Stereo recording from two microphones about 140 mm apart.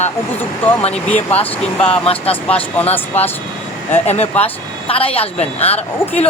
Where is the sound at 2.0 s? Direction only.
45° left (ahead or behind).